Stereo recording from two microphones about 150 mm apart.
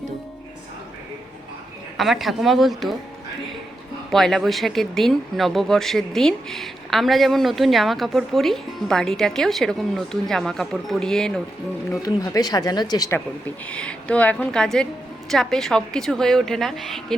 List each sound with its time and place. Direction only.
2.0 s speech: centre (ahead or behind)
4.1 s speech: 5° left (ahead or behind)
11.9 s speech: 25° left (ahead or behind)
13.7 s a woman's voice: 5° left (ahead or behind)